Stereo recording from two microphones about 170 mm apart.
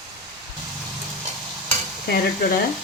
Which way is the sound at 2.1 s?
60° left (ahead or behind).